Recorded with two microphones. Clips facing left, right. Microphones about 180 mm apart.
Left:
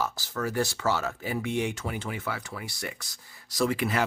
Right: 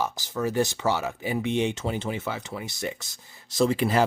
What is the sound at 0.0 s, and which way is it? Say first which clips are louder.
Speech: right 3 dB; 20° right (ahead or behind).